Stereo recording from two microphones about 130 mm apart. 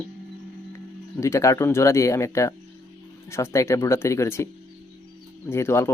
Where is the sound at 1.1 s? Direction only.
25° left (ahead or behind).